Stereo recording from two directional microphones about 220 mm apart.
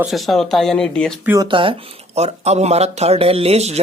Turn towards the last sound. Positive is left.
turn(degrees=-30)  # may be behind; listen again after turning